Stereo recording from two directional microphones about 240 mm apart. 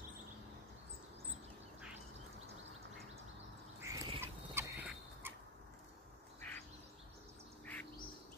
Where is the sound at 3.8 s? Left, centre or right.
Centre.